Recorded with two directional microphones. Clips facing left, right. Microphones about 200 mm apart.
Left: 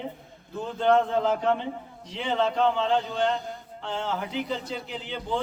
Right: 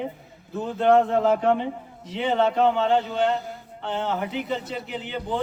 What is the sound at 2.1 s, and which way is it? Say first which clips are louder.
A man's voice: right 4 dB; 5° right (ahead or behind).